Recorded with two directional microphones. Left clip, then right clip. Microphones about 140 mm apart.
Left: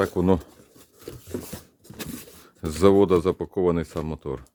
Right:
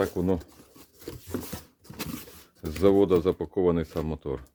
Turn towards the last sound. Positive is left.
turn(degrees=20)  # may be behind; listen again after turning